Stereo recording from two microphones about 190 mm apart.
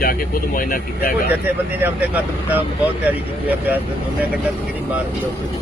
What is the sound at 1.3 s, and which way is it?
Speech, 10° right (ahead or behind).